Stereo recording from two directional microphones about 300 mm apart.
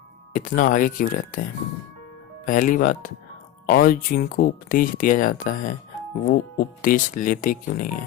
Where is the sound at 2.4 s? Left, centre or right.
Left.